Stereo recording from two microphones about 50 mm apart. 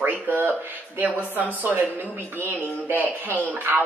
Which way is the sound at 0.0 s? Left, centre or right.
Right.